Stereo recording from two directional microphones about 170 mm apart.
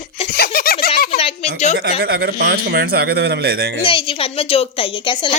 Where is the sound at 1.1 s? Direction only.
35° left (ahead or behind).